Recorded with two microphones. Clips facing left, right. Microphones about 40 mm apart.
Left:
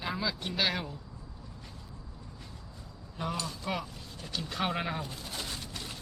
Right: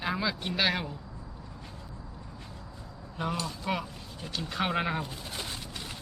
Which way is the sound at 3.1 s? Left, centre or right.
Centre.